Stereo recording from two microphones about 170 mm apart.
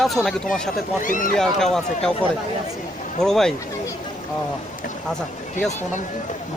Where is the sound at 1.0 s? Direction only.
50° left (ahead or behind).